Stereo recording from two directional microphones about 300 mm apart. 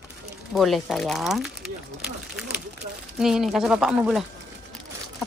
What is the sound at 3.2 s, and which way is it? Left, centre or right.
Speech, centre.